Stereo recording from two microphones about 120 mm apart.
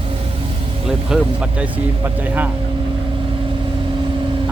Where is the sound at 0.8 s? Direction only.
5° right (ahead or behind).